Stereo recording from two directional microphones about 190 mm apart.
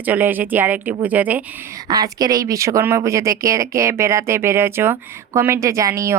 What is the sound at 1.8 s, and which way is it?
Speech, 20° right (ahead or behind).